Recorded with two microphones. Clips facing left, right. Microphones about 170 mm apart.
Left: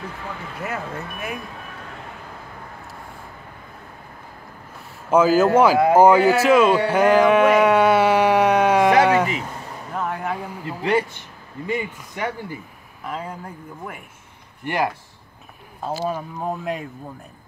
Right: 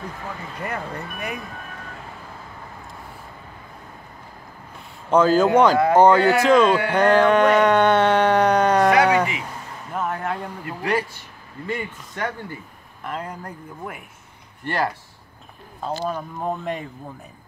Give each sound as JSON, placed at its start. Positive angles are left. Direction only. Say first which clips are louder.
{"t": 0.6, "sound": "speech", "louder": "left 1 dB", "side_deg": 5}
{"t": 5.1, "sound": "a man's voice", "louder": "left 1 dB", "side_deg": 5}
{"t": 6.9, "sound": "a sound", "louder": "left 1 dB", "side_deg": 5}
{"t": 10.8, "sound": "a man's voice", "louder": "left 3 dB", "side_deg": 20}
{"t": 14.6, "sound": "speech", "louder": "left 1 dB", "side_deg": 15}
{"t": 15.8, "sound": "speech", "louder": "left 1 dB", "side_deg": 5}